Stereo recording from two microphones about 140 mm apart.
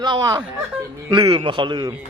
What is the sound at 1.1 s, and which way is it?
Speech, 40° right (ahead or behind).